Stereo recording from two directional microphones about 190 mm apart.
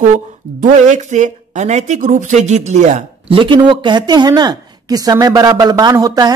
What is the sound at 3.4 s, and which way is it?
Speech, 25° right (ahead or behind).